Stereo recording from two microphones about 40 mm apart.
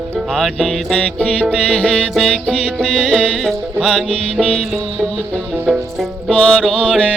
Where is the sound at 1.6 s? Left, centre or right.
Left.